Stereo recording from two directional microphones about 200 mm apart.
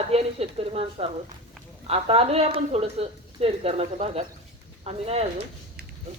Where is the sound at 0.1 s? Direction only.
30° right (ahead or behind).